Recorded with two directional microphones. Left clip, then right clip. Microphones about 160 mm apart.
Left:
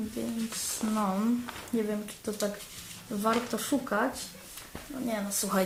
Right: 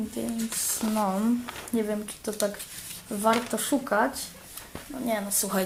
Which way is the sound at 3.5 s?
20° right (ahead or behind).